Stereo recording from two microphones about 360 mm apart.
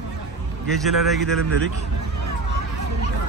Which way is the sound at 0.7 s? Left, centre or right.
Centre.